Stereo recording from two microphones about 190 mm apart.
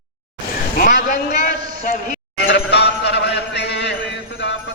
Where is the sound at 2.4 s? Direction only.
60° left (ahead or behind).